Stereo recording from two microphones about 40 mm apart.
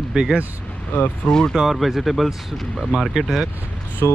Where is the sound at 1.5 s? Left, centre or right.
Centre.